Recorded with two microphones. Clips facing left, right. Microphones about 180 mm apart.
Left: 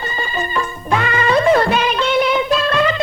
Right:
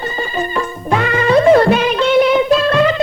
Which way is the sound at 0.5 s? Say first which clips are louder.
Right 1 dB; 40° right (ahead or behind).